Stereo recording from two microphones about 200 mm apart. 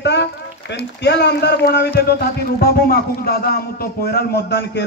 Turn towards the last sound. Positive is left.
turn(degrees=55)  # may be behind; listen again after turning